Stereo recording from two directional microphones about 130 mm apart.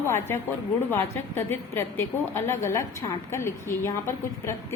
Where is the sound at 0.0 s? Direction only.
20° left (ahead or behind).